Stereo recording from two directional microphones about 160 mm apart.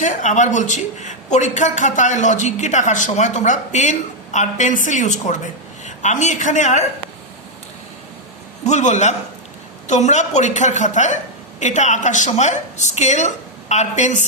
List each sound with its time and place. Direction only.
0.0 s a man's voice: 50° left (ahead or behind)
8.6 s a man's voice: 45° left (ahead or behind)